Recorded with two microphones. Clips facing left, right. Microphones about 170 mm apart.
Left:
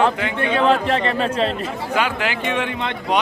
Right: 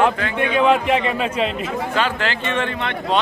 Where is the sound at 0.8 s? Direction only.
10° right (ahead or behind).